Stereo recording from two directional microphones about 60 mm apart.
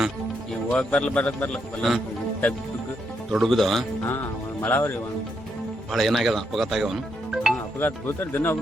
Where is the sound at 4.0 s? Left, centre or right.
Left.